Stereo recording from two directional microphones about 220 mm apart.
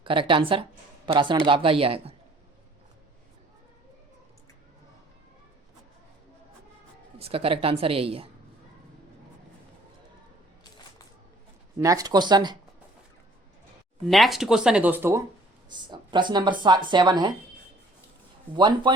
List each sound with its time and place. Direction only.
0.0 s a woman's voice: 25° right (ahead or behind)
7.2 s a woman's voice: 25° right (ahead or behind)
11.8 s a woman's voice: 15° right (ahead or behind)
14.1 s speech: centre (ahead or behind)
15.7 s a woman's voice: 20° right (ahead or behind)
18.5 s a woman's voice: 20° right (ahead or behind)